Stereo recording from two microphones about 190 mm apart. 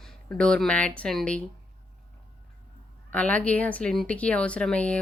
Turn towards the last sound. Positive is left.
turn(degrees=5)  # may be behind; listen again after turning